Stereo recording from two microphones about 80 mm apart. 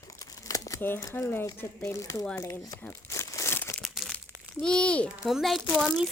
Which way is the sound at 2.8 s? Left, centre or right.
Left.